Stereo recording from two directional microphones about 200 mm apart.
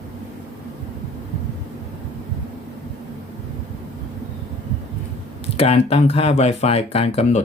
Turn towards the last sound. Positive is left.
turn(degrees=35)  # may be behind; listen again after turning